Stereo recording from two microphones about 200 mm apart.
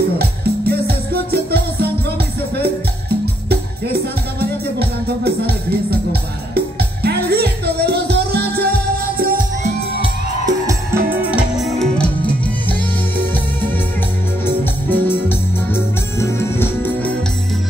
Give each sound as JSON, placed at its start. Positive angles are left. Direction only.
{"t": 0.7, "sound": "music", "side_deg": -50}
{"t": 4.4, "sound": "music", "side_deg": -50}
{"t": 10.4, "sound": "music", "side_deg": -15}
{"t": 11.2, "sound": "music", "side_deg": -5}
{"t": 14.4, "sound": "music", "side_deg": 10}